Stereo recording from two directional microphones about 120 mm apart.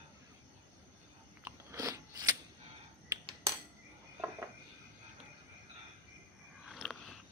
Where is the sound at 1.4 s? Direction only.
25° right (ahead or behind).